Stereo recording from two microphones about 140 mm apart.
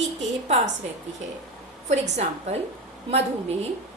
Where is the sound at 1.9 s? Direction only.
55° right (ahead or behind).